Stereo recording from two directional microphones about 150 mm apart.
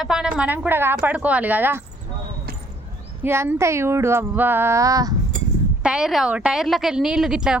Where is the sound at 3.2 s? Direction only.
15° right (ahead or behind).